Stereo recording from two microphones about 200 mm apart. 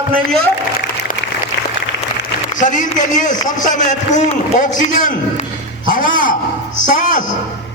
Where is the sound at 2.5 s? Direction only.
40° left (ahead or behind).